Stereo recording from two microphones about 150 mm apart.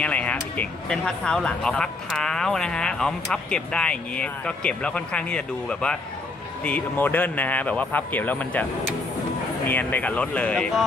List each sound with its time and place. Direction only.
0.0 s speech: 10° left (ahead or behind)
9.7 s speech: 10° left (ahead or behind)